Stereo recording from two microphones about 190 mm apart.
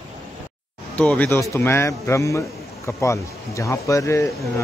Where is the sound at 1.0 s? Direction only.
5° left (ahead or behind).